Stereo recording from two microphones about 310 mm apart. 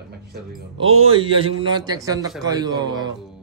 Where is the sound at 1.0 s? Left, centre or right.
Centre.